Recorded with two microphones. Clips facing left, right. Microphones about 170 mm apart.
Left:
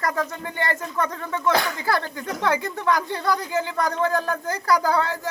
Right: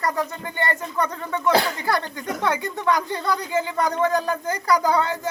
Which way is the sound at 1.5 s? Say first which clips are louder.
Right 3 dB; 25° right (ahead or behind).